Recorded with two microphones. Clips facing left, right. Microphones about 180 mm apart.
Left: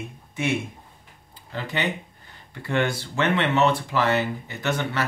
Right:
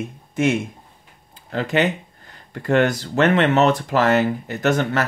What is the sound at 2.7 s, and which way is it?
Speech, 45° right (ahead or behind).